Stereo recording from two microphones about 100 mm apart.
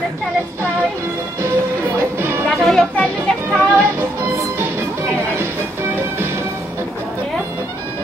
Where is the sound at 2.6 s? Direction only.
Centre (ahead or behind).